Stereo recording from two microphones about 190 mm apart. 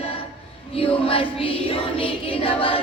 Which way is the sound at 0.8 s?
30° left (ahead or behind).